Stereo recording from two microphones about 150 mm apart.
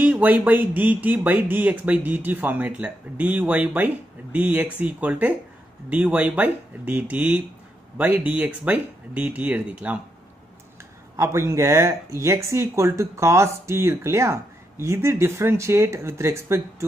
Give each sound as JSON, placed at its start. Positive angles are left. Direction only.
{"t": 0.0, "sound": "speech", "side_deg": -10}
{"t": 11.1, "sound": "speech", "side_deg": -20}